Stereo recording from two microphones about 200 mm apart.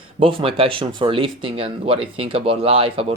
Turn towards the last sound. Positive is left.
turn(degrees=-30)  # may be behind; listen again after turning